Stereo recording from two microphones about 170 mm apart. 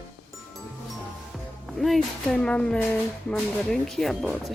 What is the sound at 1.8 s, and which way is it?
Speech, centre (ahead or behind).